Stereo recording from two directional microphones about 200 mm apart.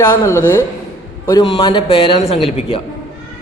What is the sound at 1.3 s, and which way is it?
A man's voice, 25° left (ahead or behind).